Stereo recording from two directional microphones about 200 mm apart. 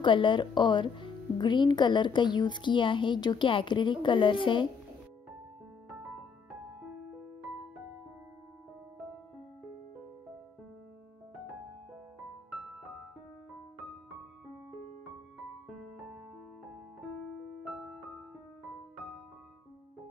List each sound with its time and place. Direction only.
0.0 s speech: 25° left (ahead or behind)
17.6 s music: 5° right (ahead or behind)